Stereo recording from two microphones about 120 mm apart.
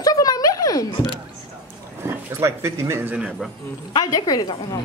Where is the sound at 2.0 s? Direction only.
25° right (ahead or behind).